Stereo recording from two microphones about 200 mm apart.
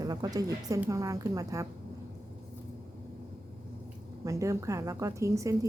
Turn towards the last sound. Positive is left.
turn(degrees=-15)  # may be behind; listen again after turning